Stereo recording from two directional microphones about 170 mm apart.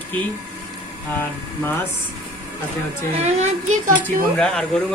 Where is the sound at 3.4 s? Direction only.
45° right (ahead or behind).